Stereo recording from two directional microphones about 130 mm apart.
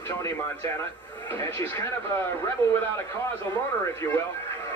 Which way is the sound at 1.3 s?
20° left (ahead or behind).